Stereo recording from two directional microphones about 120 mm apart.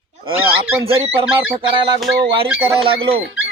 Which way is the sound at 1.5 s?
40° right (ahead or behind).